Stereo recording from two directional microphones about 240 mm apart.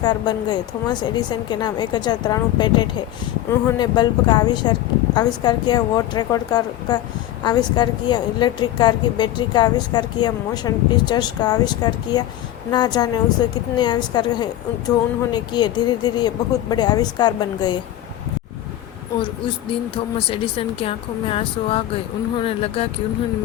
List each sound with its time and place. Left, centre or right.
0.0 s a woman's voice: centre
20.1 s speech: left